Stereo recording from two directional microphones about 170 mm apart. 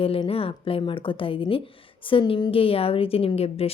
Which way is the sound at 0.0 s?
35° left (ahead or behind).